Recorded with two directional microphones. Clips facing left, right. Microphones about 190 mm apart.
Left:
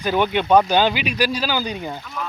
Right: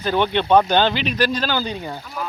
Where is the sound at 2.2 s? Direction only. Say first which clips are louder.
Right 2 dB; 5° right (ahead or behind).